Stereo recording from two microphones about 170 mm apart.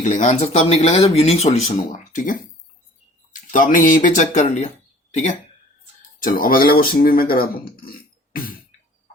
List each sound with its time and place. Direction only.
0.0 s speech: 45° left (ahead or behind)
6.2 s speech: 55° left (ahead or behind)